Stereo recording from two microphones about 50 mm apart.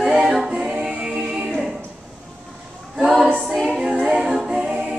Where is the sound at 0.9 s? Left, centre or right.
Centre.